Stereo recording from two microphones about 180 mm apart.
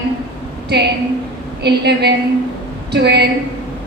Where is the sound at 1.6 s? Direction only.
70° right (ahead or behind).